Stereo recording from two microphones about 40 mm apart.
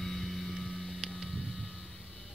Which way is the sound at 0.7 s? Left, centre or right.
Centre.